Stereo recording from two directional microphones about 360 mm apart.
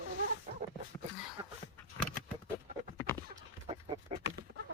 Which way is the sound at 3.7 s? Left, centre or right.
Centre.